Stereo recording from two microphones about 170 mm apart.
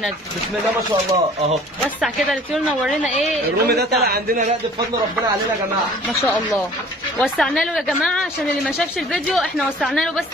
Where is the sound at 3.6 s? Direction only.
70° right (ahead or behind).